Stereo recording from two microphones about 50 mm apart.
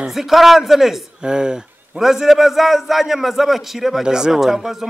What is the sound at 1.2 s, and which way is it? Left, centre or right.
A man's voice, centre.